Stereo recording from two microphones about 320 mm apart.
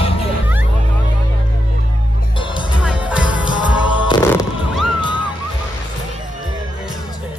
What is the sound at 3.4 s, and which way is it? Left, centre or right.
Music, centre.